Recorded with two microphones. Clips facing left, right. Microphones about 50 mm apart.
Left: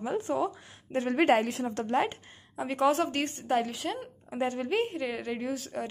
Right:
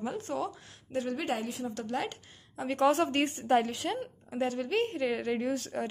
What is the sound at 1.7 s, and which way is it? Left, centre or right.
Speech, left.